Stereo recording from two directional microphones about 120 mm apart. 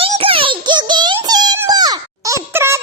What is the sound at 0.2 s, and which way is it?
Synthetic singing, 50° right (ahead or behind).